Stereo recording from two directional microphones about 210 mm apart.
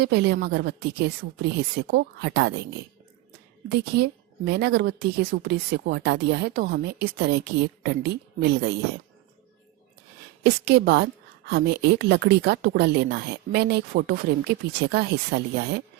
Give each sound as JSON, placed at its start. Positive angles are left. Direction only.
{"t": 0.0, "sound": "a woman's voice", "side_deg": -50}
{"t": 3.9, "sound": "a woman's voice", "side_deg": -50}
{"t": 10.4, "sound": "a woman's voice", "side_deg": -50}